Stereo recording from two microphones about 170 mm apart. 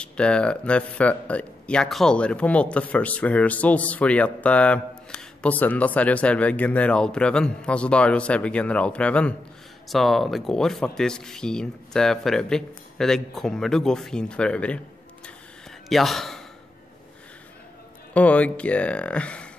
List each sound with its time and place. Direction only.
0.0 s speech: 5° left (ahead or behind)
15.9 s speech: centre (ahead or behind)
18.1 s speech: 10° left (ahead or behind)